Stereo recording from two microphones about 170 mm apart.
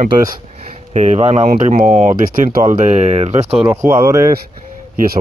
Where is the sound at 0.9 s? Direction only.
40° right (ahead or behind).